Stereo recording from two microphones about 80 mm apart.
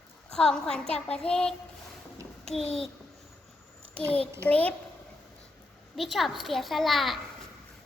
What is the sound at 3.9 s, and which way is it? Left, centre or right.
Speech, centre.